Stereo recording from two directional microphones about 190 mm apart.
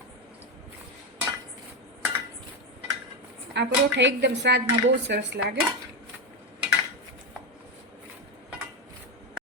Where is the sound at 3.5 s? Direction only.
65° right (ahead or behind).